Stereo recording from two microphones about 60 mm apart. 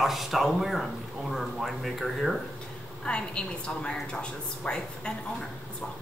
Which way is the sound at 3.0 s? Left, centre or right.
Centre.